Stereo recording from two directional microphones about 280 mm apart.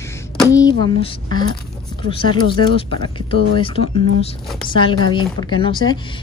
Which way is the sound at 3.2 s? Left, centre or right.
Centre.